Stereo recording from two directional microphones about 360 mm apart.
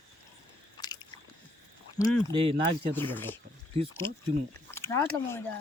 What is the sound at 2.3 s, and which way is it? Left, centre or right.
Speech, centre.